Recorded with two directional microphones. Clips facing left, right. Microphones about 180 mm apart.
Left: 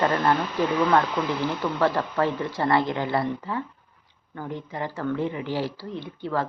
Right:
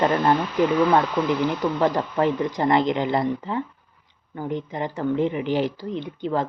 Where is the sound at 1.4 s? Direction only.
15° right (ahead or behind).